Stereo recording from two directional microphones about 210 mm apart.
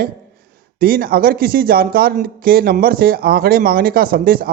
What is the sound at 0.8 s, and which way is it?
Speech, 45° right (ahead or behind).